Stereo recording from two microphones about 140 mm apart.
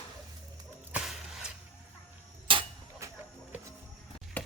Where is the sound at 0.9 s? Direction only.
5° right (ahead or behind).